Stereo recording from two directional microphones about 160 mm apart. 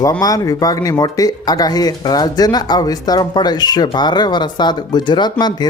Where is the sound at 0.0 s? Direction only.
25° left (ahead or behind).